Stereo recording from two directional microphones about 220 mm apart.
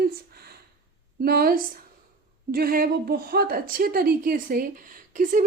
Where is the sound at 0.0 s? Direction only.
45° right (ahead or behind).